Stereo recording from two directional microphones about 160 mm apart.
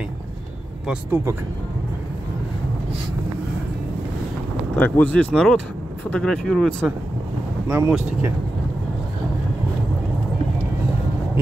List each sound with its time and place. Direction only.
4.7 s speech: 10° left (ahead or behind)
7.6 s speech: 10° right (ahead or behind)